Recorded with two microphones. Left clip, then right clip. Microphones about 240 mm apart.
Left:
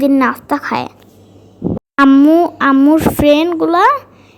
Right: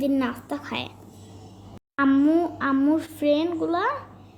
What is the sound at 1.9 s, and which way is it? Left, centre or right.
A woman's voice, left.